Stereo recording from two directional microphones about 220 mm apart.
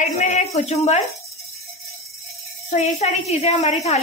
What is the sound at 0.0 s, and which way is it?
A woman's voice, 35° left (ahead or behind).